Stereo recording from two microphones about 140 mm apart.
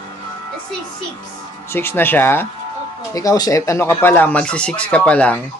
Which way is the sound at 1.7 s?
15° left (ahead or behind).